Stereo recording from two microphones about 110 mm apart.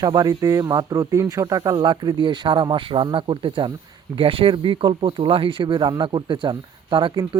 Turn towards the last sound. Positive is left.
turn(degrees=-45)  # may be behind; listen again after turning